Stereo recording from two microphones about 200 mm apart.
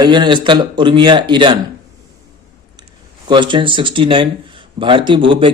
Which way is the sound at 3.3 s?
25° right (ahead or behind).